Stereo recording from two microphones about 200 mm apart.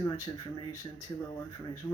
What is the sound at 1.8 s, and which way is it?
Speech, 10° left (ahead or behind).